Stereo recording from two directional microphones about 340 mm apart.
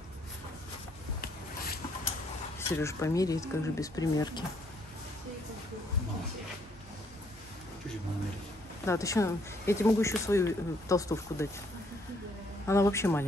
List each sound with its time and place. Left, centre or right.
1.2 s a sound: left
2.7 s speech: centre
8.8 s speech: centre
12.6 s speech: centre